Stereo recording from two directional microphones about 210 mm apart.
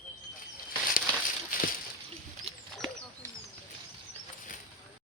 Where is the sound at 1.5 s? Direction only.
40° left (ahead or behind).